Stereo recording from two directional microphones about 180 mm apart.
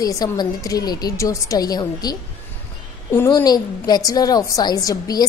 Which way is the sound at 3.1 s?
20° left (ahead or behind).